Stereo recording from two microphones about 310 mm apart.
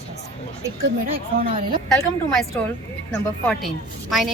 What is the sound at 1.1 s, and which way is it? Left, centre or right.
Speech, right.